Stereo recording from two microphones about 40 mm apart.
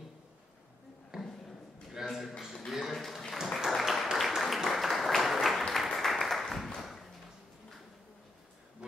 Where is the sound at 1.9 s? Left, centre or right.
Centre.